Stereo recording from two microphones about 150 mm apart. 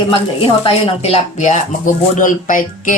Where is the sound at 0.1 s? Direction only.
40° left (ahead or behind).